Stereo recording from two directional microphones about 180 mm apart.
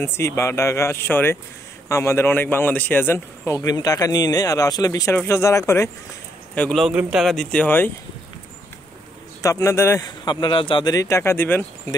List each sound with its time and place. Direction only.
0.0 s a man's voice: 15° left (ahead or behind)
6.5 s speech: 5° left (ahead or behind)
9.4 s a man's voice: 15° left (ahead or behind)